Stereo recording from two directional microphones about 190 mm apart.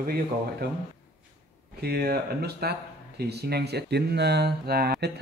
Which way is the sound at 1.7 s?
55° right (ahead or behind).